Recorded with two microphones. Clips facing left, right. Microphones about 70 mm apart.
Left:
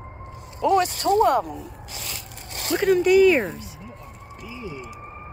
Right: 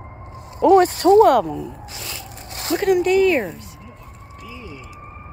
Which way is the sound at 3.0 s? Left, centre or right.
Centre.